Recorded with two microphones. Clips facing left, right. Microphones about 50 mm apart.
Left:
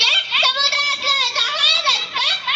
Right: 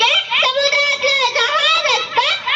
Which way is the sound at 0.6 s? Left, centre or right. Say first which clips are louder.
Right 5 dB; right.